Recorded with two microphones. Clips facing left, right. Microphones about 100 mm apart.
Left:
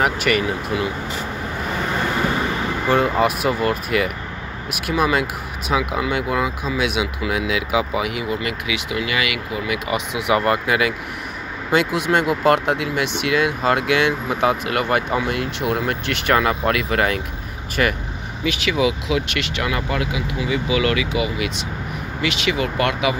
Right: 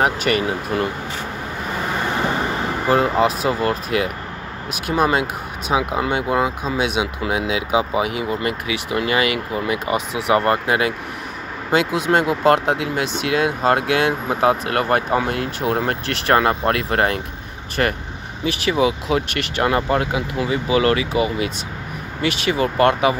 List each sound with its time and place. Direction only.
0.0 s speech: 35° right (ahead or behind)
2.9 s speech: 35° right (ahead or behind)